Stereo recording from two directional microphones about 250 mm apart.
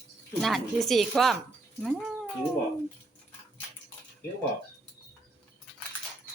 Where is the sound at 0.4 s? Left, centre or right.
Centre.